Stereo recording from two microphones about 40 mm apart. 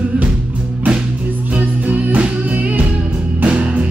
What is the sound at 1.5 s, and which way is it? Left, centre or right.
Music, right.